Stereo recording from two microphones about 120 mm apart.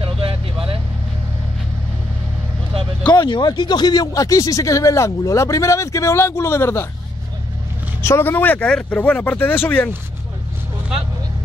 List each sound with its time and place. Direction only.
0.0 s vehicle: 50° right (ahead or behind)
3.0 s a man's voice: 40° left (ahead or behind); by 6.9 s 20° left (ahead or behind)
8.0 s speech: 20° left (ahead or behind)